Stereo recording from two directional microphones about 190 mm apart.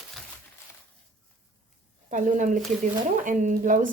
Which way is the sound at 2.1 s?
45° right (ahead or behind).